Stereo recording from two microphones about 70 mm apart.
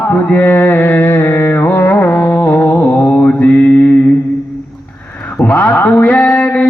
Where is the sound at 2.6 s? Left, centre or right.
Left.